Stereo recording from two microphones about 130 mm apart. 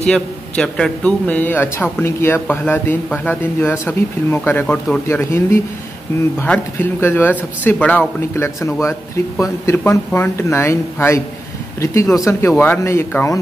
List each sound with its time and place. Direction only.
0.0 s a man's voice: 5° left (ahead or behind)